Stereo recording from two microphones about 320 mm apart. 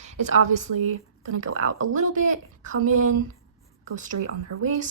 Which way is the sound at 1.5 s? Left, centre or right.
Right.